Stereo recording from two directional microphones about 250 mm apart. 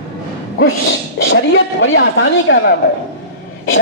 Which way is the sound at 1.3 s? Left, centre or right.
Left.